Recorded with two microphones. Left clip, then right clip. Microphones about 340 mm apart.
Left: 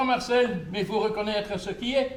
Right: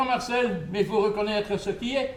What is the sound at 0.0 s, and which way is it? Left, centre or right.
A man's voice, left.